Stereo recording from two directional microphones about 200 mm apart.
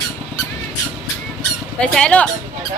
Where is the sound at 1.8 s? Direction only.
5° left (ahead or behind).